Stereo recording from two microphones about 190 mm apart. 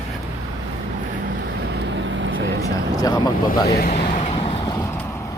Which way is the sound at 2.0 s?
80° right.